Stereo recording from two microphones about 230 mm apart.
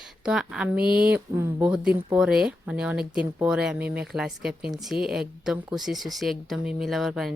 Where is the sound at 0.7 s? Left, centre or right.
Right.